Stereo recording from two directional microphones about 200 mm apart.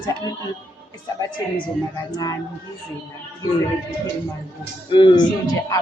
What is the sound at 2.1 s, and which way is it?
Speech, 20° left (ahead or behind).